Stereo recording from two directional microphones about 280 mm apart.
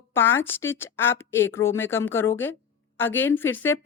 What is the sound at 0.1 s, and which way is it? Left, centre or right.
A woman's voice, centre.